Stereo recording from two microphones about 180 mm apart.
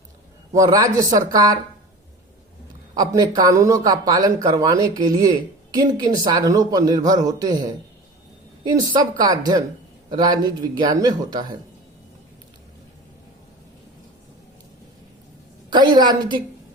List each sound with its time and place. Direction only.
0.5 s speech: 20° right (ahead or behind)
2.9 s speech: 20° right (ahead or behind)
15.7 s speech: 25° right (ahead or behind)